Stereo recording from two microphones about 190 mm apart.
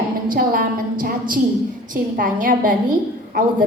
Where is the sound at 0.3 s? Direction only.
50° right (ahead or behind).